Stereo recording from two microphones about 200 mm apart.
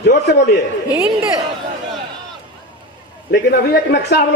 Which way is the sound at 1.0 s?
10° right (ahead or behind).